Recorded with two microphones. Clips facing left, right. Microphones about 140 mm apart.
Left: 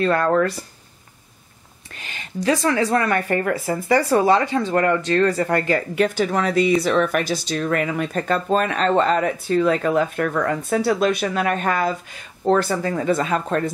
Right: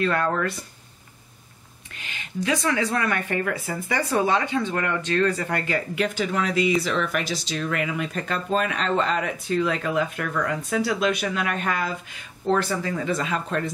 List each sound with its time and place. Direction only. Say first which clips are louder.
0.0 s speech: left 5 dB; 40° left (ahead or behind)
2.0 s speech: left 1 dB; 40° left (ahead or behind)
6.8 s speech: left 6 dB; 50° left (ahead or behind)